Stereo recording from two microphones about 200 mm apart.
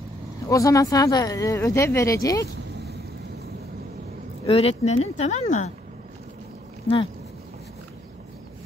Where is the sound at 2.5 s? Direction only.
55° right (ahead or behind).